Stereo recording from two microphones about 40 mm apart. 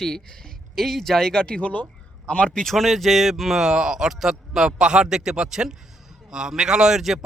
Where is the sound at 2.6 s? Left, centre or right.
Centre.